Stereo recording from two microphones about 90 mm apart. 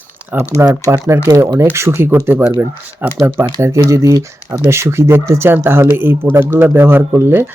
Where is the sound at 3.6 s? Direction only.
35° right (ahead or behind).